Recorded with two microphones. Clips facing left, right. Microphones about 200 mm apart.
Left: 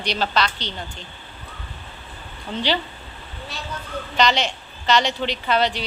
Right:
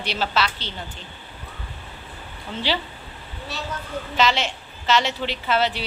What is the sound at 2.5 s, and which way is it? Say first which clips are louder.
Speech: left 2 dB; 5° right (ahead or behind).